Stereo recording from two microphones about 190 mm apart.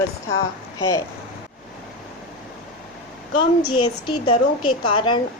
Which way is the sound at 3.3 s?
25° left (ahead or behind).